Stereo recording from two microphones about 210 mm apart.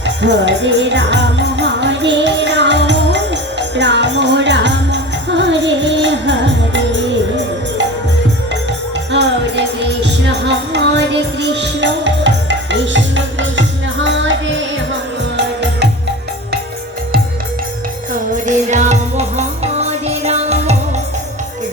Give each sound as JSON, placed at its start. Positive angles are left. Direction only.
{"t": 0.0, "sound": "music", "side_deg": -55}
{"t": 9.1, "sound": "music", "side_deg": -55}
{"t": 18.4, "sound": "music", "side_deg": -35}